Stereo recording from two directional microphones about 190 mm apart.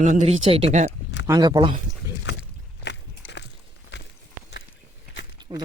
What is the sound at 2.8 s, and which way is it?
Biting, 65° left (ahead or behind).